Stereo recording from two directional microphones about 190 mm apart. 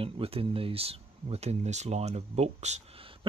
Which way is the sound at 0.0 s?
30° right (ahead or behind).